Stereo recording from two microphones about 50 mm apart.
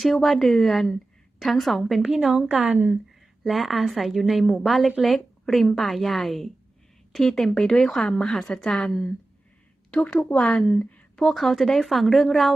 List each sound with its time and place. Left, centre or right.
0.0 s a woman's voice: centre
2.0 s a woman's voice: centre
2.7 s a woman's voice: right
3.4 s a woman's voice: centre
10.0 s speech: left
10.2 s a woman's voice: centre
10.7 s a woman's voice: left
11.2 s a woman's voice: centre